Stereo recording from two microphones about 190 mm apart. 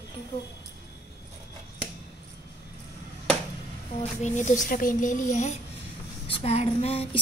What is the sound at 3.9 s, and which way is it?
Speech, 40° left (ahead or behind).